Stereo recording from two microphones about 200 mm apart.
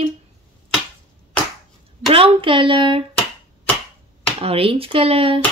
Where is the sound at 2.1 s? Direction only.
25° right (ahead or behind).